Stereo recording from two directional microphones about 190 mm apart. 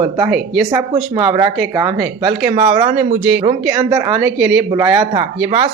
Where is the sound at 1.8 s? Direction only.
20° right (ahead or behind).